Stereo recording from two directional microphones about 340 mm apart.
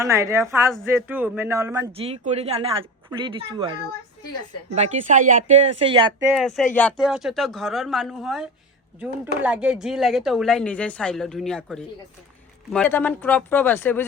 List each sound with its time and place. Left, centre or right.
0.0 s speech: centre
6.3 s a woman's voice: centre